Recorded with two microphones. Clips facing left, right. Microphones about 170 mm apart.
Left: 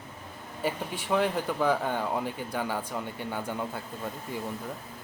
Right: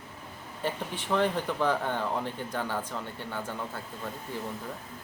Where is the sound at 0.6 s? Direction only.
10° left (ahead or behind).